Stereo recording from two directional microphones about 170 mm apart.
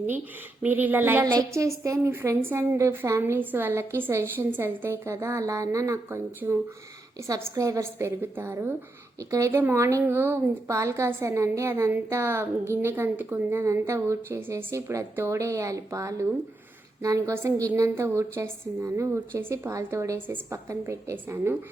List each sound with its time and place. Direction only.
0.6 s a woman's voice: 10° right (ahead or behind)